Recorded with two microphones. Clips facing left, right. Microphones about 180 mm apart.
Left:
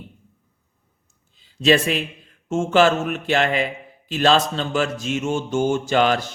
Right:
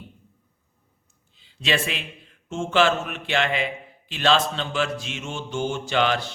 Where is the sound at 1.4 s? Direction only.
40° left (ahead or behind).